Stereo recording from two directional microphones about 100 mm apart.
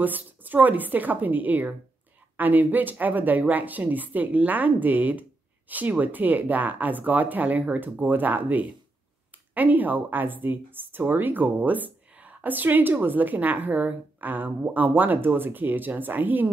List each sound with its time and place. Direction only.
0.0 s speech: 15° right (ahead or behind)